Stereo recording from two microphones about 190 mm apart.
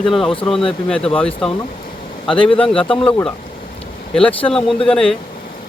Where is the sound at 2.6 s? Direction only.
5° left (ahead or behind).